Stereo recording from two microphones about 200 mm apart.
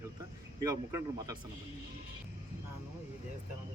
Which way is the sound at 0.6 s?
15° right (ahead or behind).